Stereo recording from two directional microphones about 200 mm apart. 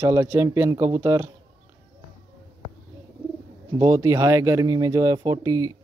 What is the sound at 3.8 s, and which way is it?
Speech, 15° right (ahead or behind).